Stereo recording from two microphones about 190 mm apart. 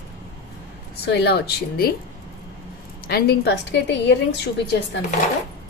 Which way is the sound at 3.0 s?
55° left (ahead or behind).